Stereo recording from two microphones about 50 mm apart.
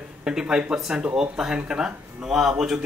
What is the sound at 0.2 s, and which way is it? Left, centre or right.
Speech, centre.